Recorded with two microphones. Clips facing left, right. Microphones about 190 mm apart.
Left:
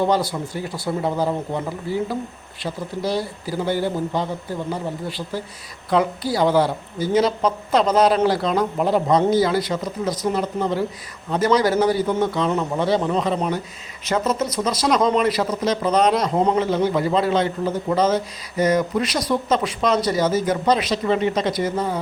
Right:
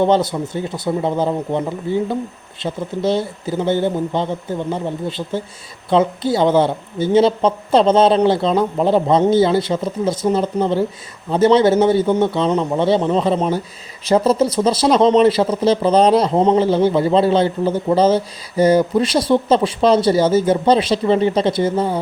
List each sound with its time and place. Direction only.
0.0 s speech: 20° right (ahead or behind)